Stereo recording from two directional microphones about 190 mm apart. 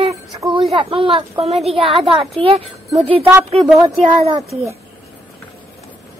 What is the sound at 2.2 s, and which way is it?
Speech, centre (ahead or behind).